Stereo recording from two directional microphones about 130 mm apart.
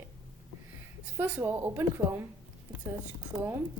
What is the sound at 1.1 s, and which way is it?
A woman's voice, 15° right (ahead or behind).